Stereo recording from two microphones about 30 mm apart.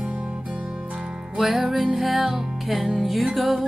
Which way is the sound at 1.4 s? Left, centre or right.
Centre.